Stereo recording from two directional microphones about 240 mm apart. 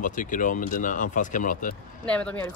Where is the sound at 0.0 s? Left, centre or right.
Left.